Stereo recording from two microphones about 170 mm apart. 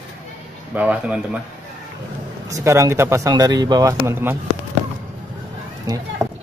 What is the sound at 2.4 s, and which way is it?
Speech, 20° right (ahead or behind).